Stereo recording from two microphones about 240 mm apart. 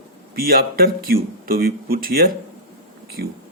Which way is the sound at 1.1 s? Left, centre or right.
Right.